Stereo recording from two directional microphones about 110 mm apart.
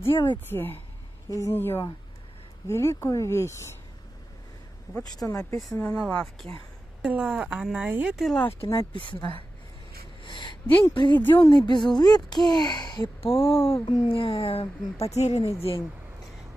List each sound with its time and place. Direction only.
0.0 s a woman's voice: 50° left (ahead or behind)
0.5 s speech: 20° left (ahead or behind)
5.1 s speech: 30° left (ahead or behind)
5.8 s speech: 10° left (ahead or behind)
7.0 s speech: 5° right (ahead or behind)
8.2 s speech: 5° left (ahead or behind)
10.2 s a woman's voice: 45° left (ahead or behind)
13.2 s speech: 55° left (ahead or behind); by 15.4 s 85° left
15.4 s speech: 55° left (ahead or behind)